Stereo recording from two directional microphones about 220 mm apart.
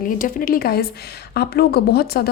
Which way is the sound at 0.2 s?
40° left (ahead or behind).